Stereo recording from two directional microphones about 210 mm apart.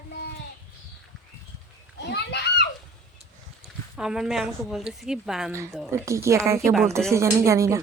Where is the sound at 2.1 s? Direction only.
55° left (ahead or behind).